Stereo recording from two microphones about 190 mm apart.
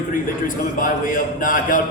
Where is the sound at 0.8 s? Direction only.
45° left (ahead or behind).